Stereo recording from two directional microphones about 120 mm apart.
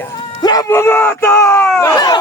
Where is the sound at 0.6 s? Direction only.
20° left (ahead or behind).